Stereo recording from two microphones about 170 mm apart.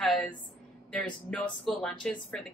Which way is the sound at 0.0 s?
Centre (ahead or behind).